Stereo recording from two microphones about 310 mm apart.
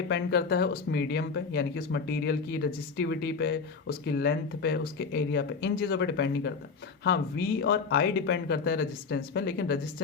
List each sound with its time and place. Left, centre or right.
0.1 s speech: left